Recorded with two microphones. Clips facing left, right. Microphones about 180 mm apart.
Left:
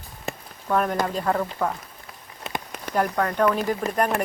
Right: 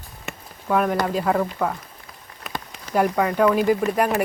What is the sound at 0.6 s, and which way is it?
Speech, 5° right (ahead or behind).